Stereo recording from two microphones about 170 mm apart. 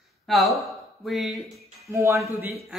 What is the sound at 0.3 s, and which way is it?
Speech, centre (ahead or behind).